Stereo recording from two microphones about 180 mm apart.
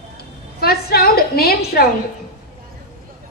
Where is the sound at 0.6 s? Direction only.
60° left (ahead or behind).